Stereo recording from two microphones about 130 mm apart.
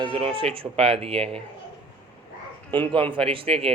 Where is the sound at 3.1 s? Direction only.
45° right (ahead or behind).